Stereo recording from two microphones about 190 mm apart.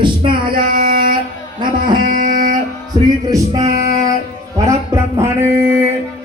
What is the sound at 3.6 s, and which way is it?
Female singing, 40° right (ahead or behind).